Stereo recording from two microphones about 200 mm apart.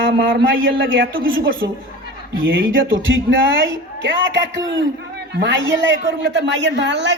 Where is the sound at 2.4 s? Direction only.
70° right (ahead or behind).